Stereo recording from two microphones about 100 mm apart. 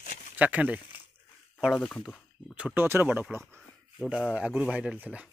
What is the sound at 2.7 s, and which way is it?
Speech, 20° right (ahead or behind).